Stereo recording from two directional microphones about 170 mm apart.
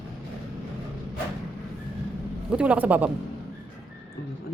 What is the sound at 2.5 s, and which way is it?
Speech, 5° right (ahead or behind).